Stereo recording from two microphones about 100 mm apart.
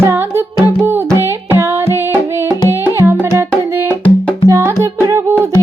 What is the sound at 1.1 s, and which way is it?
Music, 25° right (ahead or behind).